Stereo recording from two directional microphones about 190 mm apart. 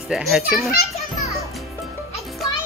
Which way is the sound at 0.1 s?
Centre (ahead or behind).